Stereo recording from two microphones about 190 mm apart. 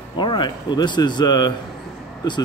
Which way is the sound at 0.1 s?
25° left (ahead or behind).